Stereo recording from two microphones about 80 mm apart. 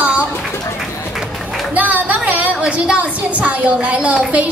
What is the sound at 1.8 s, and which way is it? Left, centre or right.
A woman's voice, centre.